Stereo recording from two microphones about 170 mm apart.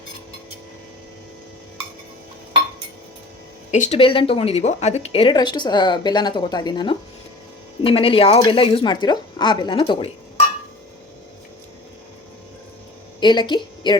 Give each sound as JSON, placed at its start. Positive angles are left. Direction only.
{"t": 3.7, "sound": "speech", "side_deg": 40}
{"t": 13.1, "sound": "a woman's voice", "side_deg": 25}